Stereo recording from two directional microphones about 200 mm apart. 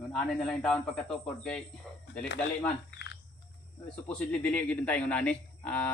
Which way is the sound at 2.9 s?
60° left (ahead or behind).